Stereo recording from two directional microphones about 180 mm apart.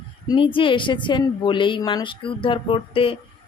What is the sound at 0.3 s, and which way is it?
Speech, 30° left (ahead or behind).